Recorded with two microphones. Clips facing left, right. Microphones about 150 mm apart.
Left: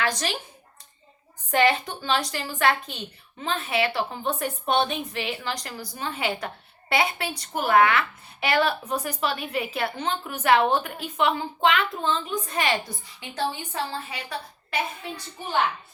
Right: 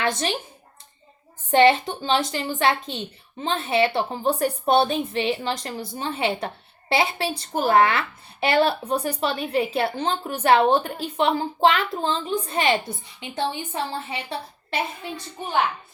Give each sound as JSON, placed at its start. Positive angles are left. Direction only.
{"t": 0.0, "sound": "a woman's voice", "side_deg": -25}
{"t": 1.5, "sound": "a woman's voice", "side_deg": -25}